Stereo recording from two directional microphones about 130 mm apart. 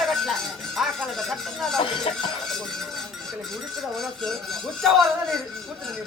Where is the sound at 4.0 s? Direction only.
Centre (ahead or behind).